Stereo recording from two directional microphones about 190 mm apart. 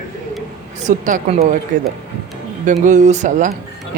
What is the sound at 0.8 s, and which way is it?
Speech, 40° right (ahead or behind).